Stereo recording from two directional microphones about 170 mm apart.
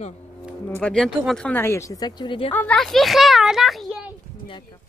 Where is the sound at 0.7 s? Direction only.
5° left (ahead or behind); by 2.5 s 30° left (ahead or behind).